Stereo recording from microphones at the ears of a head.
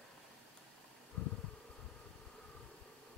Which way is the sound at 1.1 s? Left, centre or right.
Left.